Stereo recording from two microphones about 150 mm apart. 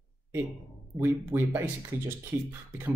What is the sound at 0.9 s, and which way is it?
Speech, 15° right (ahead or behind).